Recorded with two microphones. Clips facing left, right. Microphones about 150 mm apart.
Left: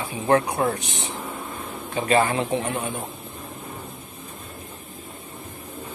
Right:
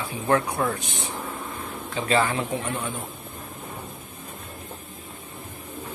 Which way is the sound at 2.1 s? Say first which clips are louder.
Left 3 dB; 50° left (ahead or behind).